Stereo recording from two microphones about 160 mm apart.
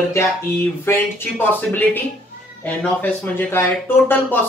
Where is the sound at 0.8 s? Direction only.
15° left (ahead or behind).